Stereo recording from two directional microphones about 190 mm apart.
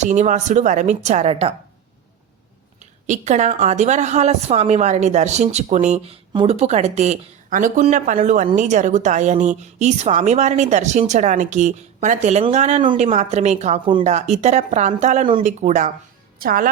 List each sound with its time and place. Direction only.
0.0 s a woman's voice: 40° right (ahead or behind)
3.1 s a woman's voice: 40° right (ahead or behind)
16.4 s a woman's voice: 50° right (ahead or behind)